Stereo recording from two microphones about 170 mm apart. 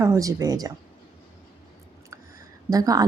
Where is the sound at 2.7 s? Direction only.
20° right (ahead or behind).